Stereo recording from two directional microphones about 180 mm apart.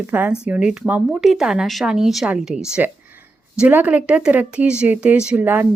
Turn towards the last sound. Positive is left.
turn(degrees=-10)  # may be behind; listen again after turning